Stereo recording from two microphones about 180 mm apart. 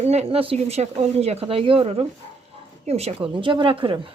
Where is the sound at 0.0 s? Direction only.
35° right (ahead or behind).